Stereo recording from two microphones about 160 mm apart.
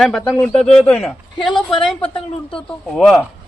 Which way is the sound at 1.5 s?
30° left (ahead or behind).